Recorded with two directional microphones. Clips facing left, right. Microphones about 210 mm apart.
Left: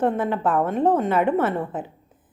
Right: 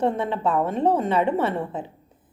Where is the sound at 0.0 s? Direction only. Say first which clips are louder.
Left 1 dB; 5° left (ahead or behind).